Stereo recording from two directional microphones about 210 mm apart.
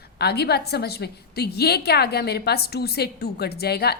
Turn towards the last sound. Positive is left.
turn(degrees=50)  # may be behind; listen again after turning